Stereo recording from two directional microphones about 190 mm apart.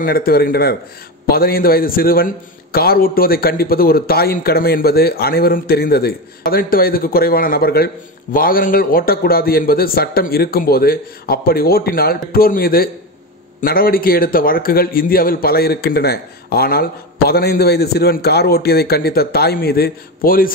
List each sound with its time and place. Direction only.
0.0 s a man's voice: 50° left (ahead or behind)